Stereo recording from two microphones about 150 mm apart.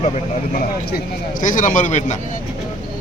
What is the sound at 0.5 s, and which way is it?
A man's voice, 75° left (ahead or behind).